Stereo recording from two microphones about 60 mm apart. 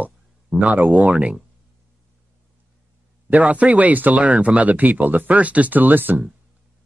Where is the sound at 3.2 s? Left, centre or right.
Right.